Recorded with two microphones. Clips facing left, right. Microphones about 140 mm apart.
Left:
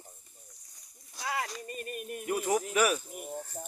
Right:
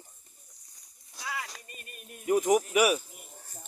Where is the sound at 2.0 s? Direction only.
65° left (ahead or behind).